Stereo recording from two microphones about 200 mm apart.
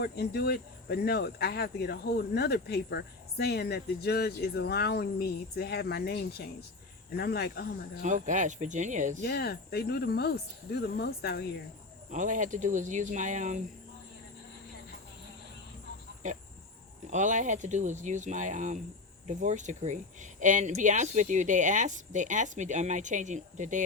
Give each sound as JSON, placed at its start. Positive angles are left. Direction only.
{"t": 0.0, "sound": "speech", "side_deg": 55}
{"t": 8.0, "sound": "speech", "side_deg": -40}
{"t": 9.2, "sound": "speech", "side_deg": 55}
{"t": 12.1, "sound": "speech", "side_deg": -40}
{"t": 16.2, "sound": "speech", "side_deg": -40}